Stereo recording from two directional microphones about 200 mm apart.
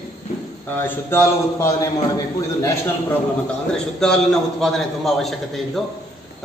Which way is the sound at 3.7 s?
5° left (ahead or behind).